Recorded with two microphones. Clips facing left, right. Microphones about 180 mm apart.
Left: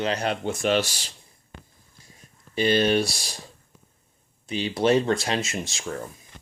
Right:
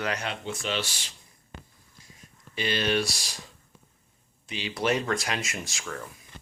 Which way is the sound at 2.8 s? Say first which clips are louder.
Left 5 dB; 30° left (ahead or behind).